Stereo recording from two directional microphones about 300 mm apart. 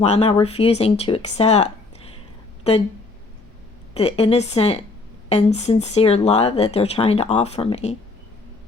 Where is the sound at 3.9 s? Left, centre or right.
Left.